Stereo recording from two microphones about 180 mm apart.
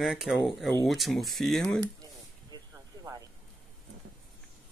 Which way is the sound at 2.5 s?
20° right (ahead or behind).